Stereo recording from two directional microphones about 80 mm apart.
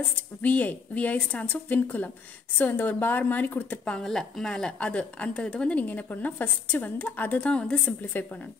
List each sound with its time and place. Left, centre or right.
0.4 s a woman's voice: centre
3.8 s a woman's voice: centre